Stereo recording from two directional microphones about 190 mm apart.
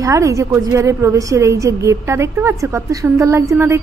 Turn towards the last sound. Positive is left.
turn(degrees=-15)  # may be behind; listen again after turning